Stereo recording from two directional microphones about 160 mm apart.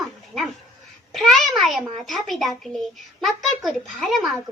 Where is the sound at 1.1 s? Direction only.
Centre (ahead or behind).